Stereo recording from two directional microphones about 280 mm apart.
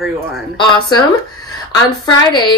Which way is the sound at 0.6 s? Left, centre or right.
Centre.